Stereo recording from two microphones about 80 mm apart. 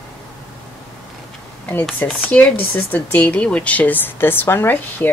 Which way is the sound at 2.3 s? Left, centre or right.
Centre.